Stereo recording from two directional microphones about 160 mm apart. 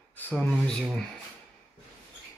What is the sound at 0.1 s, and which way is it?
Speech, 10° left (ahead or behind).